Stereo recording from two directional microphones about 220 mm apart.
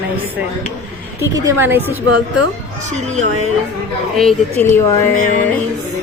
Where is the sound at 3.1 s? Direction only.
30° right (ahead or behind).